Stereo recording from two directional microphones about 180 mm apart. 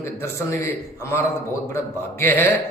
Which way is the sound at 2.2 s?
10° left (ahead or behind).